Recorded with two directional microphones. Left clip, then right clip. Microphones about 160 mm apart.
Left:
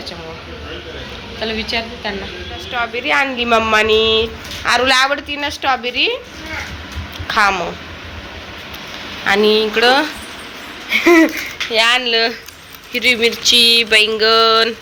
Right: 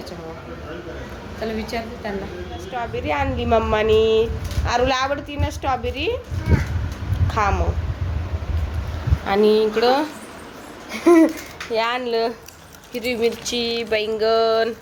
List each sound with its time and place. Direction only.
1.4 s speech: 10° right (ahead or behind)
7.3 s a woman's voice: 15° right (ahead or behind)
9.2 s speech: 15° right (ahead or behind)
10.8 s a sound: 10° right (ahead or behind)
11.7 s speech: 15° right (ahead or behind)